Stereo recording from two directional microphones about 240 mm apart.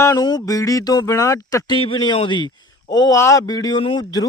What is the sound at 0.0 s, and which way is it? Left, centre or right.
A man's voice, centre.